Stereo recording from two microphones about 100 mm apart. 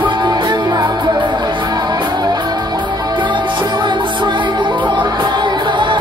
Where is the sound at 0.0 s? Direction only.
50° right (ahead or behind).